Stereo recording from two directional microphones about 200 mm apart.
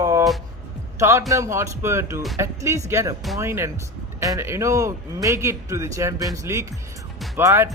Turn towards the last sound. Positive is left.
turn(degrees=-15)  # may be behind; listen again after turning